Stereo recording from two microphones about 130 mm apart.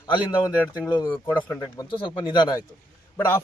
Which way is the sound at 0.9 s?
35° left (ahead or behind).